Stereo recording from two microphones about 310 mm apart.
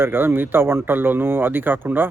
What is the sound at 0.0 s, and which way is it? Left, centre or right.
Speech, centre.